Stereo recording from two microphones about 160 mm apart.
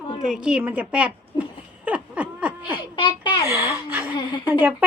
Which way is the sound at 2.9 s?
30° left (ahead or behind).